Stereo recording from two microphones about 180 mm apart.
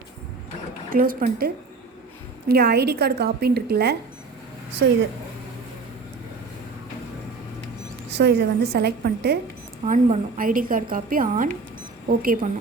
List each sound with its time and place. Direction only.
0.9 s a woman's voice: 55° right (ahead or behind)
2.5 s a woman's voice: 60° right (ahead or behind)
8.1 s a woman's voice: 70° right (ahead or behind)
9.8 s a woman's voice: 45° right (ahead or behind)